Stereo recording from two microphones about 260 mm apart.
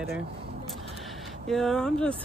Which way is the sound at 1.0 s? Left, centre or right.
Centre.